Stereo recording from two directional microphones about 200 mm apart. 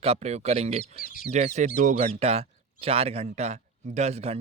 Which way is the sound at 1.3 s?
35° right (ahead or behind).